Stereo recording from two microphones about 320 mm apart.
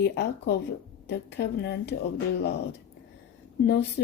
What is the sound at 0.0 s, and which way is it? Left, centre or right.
A woman's voice, left.